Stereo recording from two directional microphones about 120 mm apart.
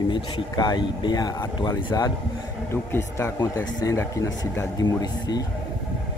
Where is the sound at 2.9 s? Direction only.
25° left (ahead or behind).